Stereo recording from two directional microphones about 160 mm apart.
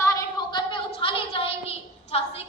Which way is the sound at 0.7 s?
35° left (ahead or behind).